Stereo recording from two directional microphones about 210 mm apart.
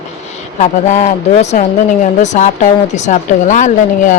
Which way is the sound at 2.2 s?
35° left (ahead or behind).